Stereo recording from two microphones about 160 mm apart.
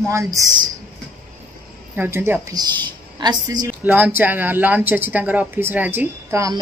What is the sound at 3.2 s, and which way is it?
Speech, 25° right (ahead or behind).